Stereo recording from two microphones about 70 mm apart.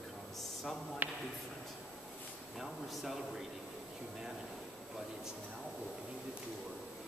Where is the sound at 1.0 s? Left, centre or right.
Right.